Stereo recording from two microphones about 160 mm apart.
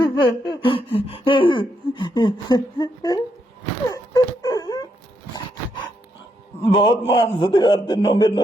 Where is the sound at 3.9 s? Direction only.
20° left (ahead or behind).